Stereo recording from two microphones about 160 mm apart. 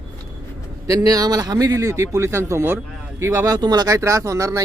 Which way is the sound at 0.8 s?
20° right (ahead or behind).